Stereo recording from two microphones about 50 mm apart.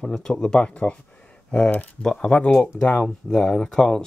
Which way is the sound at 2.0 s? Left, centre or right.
Centre.